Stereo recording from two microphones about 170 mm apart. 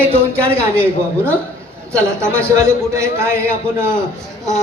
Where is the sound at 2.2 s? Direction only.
15° right (ahead or behind).